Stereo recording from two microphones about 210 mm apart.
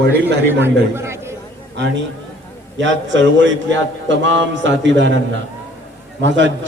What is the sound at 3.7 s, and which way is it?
A man's voice, 60° right (ahead or behind).